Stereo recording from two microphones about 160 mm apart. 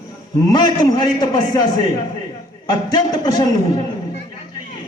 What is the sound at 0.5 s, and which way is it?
A man's voice, 25° left (ahead or behind).